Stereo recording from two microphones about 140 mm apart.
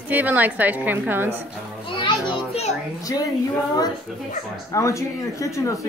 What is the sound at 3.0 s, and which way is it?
Speech, 25° left (ahead or behind).